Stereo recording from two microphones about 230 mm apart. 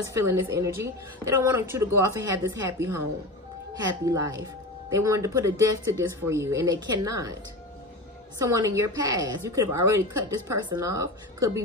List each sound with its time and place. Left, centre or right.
0.0 s speech: centre
8.4 s speech: centre